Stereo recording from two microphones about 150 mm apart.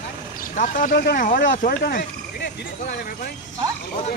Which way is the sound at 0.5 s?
60° left (ahead or behind).